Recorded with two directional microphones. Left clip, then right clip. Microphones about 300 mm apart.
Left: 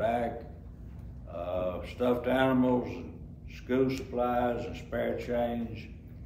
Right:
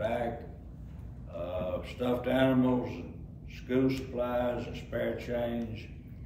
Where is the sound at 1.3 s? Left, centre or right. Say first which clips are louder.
Left 2 dB; centre.